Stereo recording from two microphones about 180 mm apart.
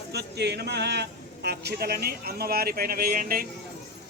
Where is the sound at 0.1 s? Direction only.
70° right (ahead or behind).